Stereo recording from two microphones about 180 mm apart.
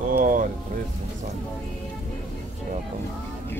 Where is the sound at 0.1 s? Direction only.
50° right (ahead or behind).